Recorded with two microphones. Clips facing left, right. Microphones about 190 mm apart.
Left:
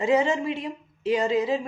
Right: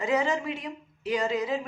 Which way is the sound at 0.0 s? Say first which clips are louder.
Left 4 dB; 25° left (ahead or behind).